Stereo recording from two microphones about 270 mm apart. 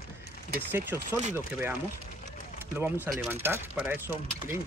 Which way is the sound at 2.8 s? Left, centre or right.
Centre.